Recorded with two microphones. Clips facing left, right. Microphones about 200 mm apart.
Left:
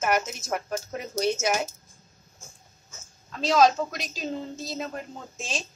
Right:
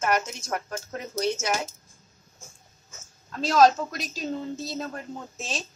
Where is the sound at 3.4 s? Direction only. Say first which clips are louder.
Right 1 dB; centre (ahead or behind).